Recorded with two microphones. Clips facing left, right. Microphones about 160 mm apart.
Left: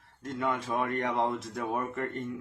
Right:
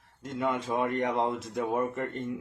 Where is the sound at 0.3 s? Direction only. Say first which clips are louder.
Right 1 dB; 20° right (ahead or behind).